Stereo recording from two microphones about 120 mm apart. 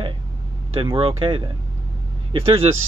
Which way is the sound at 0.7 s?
50° right (ahead or behind).